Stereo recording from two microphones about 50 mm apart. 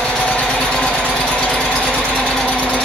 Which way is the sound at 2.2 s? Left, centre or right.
Centre.